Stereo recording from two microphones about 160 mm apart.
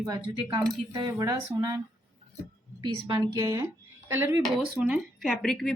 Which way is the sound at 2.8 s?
25° right (ahead or behind).